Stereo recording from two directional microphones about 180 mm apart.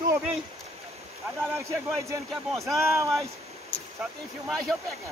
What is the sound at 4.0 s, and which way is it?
Speech, centre (ahead or behind).